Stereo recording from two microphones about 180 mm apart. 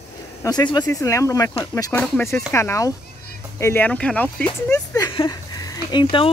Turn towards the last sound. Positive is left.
turn(degrees=25)  # may be behind; listen again after turning